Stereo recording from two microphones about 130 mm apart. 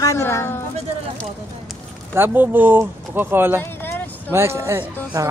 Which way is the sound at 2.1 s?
15° right (ahead or behind).